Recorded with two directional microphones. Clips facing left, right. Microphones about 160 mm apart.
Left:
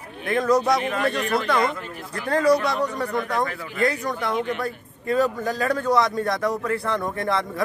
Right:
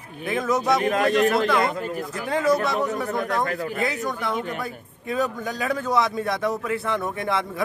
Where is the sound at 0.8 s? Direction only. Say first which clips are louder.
Right 3 dB; 40° right (ahead or behind).